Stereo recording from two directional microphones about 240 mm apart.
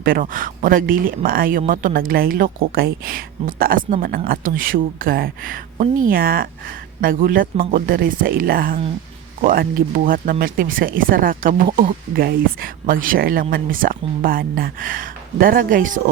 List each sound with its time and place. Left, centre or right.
0.0 s speech: right